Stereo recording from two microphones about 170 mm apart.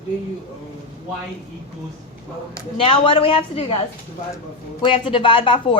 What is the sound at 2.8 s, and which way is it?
Speech, 30° left (ahead or behind).